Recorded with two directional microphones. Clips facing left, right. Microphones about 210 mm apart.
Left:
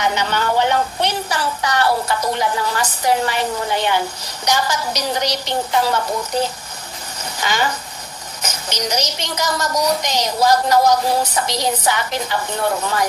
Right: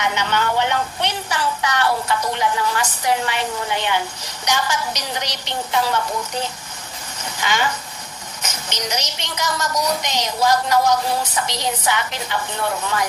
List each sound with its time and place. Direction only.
0.0 s a woman's voice: 35° left (ahead or behind)